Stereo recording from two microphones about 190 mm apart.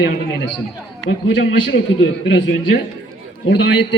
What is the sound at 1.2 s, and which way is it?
Speech, 80° left.